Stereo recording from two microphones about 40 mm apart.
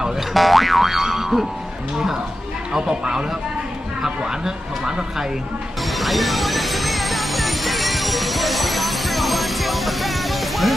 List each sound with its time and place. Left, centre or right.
0.3 s boing: centre
2.7 s speech: centre
6.0 s music: centre